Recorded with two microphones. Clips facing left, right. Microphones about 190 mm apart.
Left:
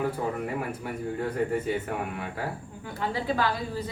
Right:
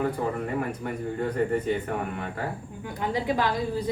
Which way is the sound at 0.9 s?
5° left (ahead or behind).